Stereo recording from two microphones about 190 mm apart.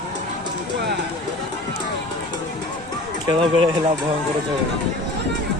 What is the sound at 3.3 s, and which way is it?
Speech, 25° right (ahead or behind).